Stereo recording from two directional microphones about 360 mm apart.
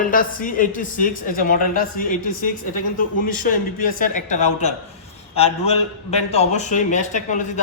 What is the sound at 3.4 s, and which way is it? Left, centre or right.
A man's voice, left.